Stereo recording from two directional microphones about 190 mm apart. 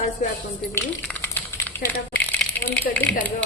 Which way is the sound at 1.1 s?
10° left (ahead or behind).